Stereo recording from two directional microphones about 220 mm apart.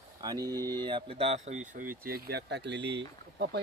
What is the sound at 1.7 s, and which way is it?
Speech, 40° right (ahead or behind).